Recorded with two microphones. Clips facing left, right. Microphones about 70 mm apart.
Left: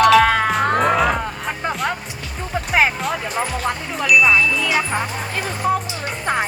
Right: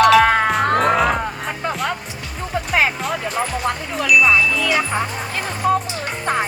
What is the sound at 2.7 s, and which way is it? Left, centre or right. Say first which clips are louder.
Music: left 2 dB; centre.